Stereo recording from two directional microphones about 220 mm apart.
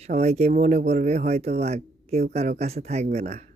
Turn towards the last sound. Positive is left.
turn(degrees=-30)  # may be behind; listen again after turning